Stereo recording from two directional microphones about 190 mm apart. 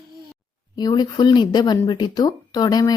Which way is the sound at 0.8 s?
20° left (ahead or behind).